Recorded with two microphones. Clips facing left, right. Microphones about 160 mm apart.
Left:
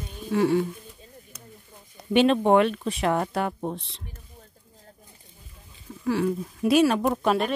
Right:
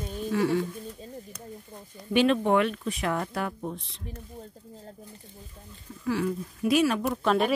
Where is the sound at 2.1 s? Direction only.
25° left (ahead or behind).